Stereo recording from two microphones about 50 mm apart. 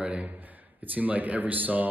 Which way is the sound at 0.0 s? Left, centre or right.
Right.